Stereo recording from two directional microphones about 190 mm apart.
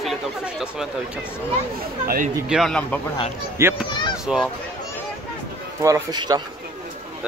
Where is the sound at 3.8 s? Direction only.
25° left (ahead or behind).